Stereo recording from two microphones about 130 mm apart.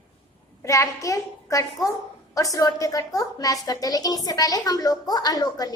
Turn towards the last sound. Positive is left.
turn(degrees=30)  # may be behind; listen again after turning